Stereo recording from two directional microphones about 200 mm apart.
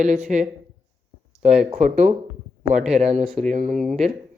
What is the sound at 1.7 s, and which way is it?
Speech, 35° right (ahead or behind).